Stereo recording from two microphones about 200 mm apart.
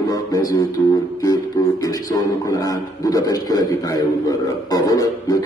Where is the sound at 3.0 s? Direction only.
15° left (ahead or behind).